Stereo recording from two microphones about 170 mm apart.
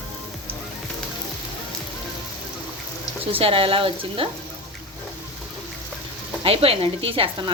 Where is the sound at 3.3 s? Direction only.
35° right (ahead or behind).